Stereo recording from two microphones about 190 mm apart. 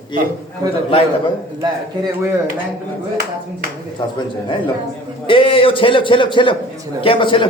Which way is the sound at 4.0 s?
25° left (ahead or behind).